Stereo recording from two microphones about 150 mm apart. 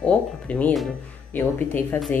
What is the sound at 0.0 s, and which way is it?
A woman's voice, 10° left (ahead or behind).